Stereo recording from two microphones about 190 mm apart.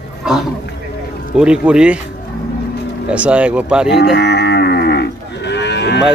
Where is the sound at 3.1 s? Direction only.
5° right (ahead or behind).